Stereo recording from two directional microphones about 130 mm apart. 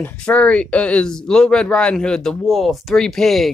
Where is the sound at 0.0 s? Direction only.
10° left (ahead or behind).